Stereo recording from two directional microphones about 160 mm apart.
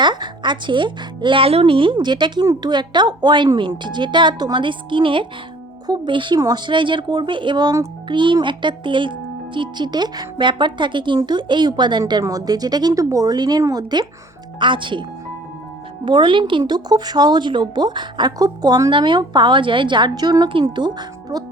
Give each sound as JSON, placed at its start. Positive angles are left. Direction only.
{"t": 0.0, "sound": "speech", "side_deg": -30}
{"t": 16.0, "sound": "speech", "side_deg": -30}